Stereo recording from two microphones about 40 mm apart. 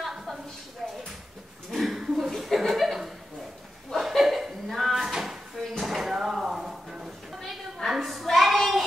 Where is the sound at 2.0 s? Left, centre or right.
Centre.